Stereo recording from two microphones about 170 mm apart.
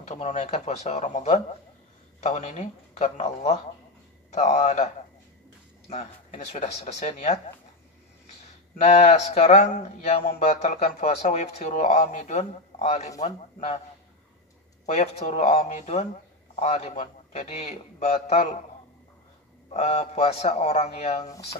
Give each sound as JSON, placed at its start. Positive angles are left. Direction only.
{"t": 0.0, "sound": "a man's voice", "side_deg": 40}
{"t": 5.9, "sound": "a man's voice", "side_deg": 40}
{"t": 8.7, "sound": "a man's voice", "side_deg": 40}
{"t": 14.9, "sound": "a man's voice", "side_deg": 40}
{"t": 19.7, "sound": "a man's voice", "side_deg": 40}